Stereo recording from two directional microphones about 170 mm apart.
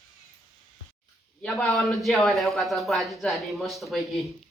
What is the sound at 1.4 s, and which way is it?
A man's voice, 5° left (ahead or behind).